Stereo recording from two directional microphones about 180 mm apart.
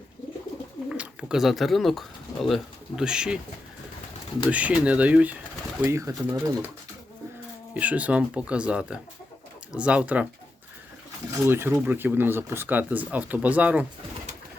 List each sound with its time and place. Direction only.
0.9 s speech: 5° right (ahead or behind)
4.5 s speech: 5° right (ahead or behind)
7.7 s speech: 10° right (ahead or behind)
11.4 s speech: 10° right (ahead or behind)